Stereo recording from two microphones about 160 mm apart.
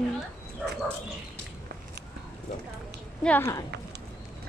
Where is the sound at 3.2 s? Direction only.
15° left (ahead or behind).